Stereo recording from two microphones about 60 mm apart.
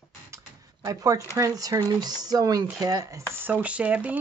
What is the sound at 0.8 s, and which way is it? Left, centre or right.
Speech, right.